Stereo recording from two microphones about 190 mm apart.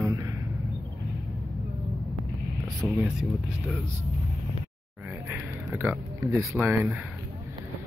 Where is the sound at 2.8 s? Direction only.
5° right (ahead or behind).